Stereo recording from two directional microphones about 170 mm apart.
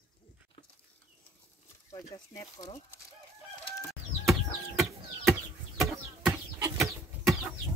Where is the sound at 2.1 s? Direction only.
25° left (ahead or behind).